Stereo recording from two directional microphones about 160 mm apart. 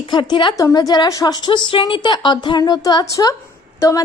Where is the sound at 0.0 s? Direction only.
30° left (ahead or behind).